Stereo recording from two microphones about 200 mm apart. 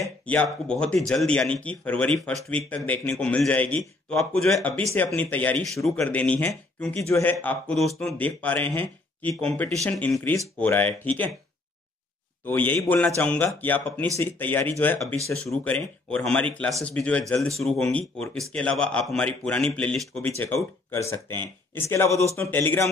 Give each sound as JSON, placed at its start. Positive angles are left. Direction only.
{"t": 0.0, "sound": "speech", "side_deg": 5}
{"t": 12.4, "sound": "speech", "side_deg": 10}